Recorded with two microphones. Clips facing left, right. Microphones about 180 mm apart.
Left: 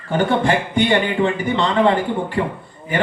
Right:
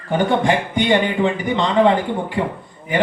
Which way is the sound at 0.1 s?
15° right (ahead or behind).